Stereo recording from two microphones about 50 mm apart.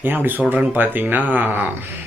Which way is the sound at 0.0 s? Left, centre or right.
Right.